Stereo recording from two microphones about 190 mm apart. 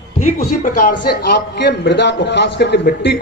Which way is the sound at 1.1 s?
55° left (ahead or behind).